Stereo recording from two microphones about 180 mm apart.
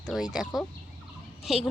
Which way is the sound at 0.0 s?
Centre (ahead or behind).